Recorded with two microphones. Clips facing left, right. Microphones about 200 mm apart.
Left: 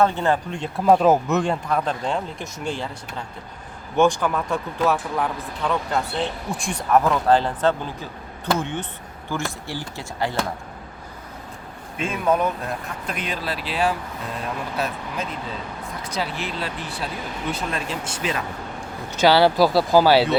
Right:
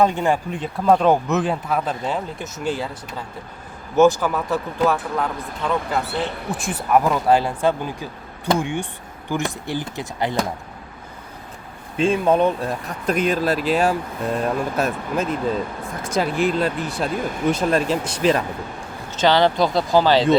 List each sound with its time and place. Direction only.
0.0 s speech: 15° right (ahead or behind)
0.9 s speech: 5° left (ahead or behind)
3.9 s speech: 5° right (ahead or behind)
11.9 s speech: 30° right (ahead or behind)
13.1 s speech: 45° right (ahead or behind)
19.1 s speech: 10° left (ahead or behind)